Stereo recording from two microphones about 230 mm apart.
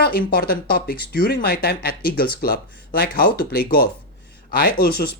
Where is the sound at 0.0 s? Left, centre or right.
Left.